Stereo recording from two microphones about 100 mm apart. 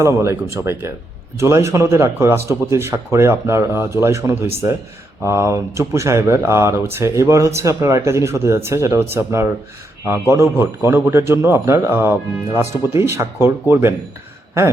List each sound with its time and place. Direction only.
0.0 s a man's voice: 25° right (ahead or behind)